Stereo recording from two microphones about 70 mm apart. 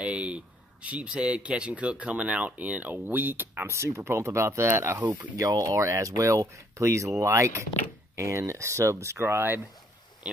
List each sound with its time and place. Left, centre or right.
0.0 s a sound: centre
0.8 s speech: centre
3.7 s speech: right
5.3 s speech: right
5.8 s speech: right
10.3 s speech: centre